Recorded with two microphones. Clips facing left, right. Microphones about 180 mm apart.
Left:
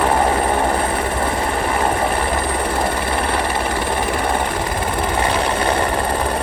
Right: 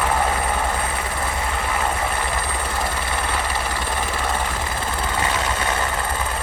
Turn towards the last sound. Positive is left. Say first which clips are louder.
# left 6 dB
turn(degrees=30)  # may be behind; listen again after turning